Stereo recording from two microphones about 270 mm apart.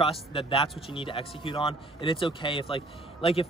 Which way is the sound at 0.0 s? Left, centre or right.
Left.